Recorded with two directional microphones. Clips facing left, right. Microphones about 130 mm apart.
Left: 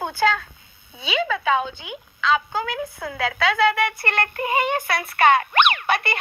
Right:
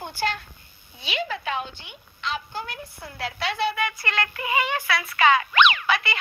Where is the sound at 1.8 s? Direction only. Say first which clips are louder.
Left 11 dB; 90° left.